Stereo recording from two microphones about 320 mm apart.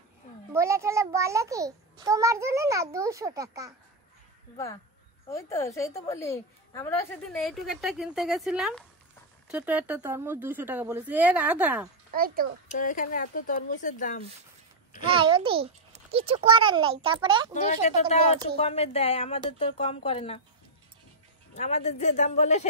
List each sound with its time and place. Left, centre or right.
0.5 s a child's voice: centre
5.3 s a woman's voice: centre
12.1 s a child's voice: right
12.7 s speech: left
15.1 s a child's voice: centre
17.6 s speech: left
21.5 s speech: centre